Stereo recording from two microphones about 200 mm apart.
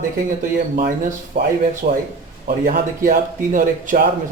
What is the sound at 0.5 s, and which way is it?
Speech, 45° right (ahead or behind).